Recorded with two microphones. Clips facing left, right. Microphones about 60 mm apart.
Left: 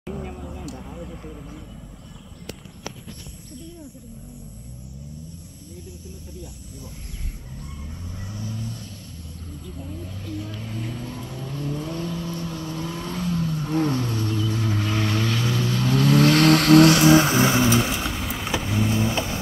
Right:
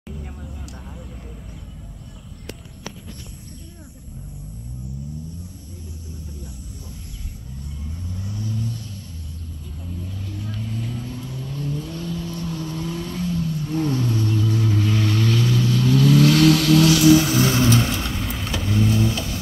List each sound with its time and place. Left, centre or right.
10.6 s vehicle: centre
13.7 s vehicle: left
16.4 s vehicle: left
17.7 s vehicle: centre
18.9 s vehicle: left